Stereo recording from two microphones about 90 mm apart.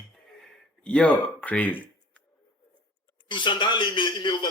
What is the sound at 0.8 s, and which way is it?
Speech, 10° left (ahead or behind).